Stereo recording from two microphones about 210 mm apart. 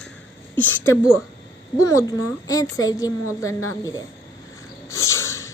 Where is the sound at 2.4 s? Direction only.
15° left (ahead or behind).